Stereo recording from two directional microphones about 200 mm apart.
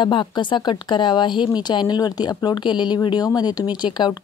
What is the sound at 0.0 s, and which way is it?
Speech, 25° left (ahead or behind).